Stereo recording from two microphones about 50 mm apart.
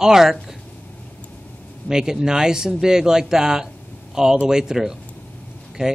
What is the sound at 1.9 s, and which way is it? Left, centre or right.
A man's voice, centre.